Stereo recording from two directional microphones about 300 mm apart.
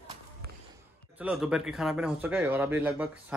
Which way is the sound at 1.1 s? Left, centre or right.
Centre.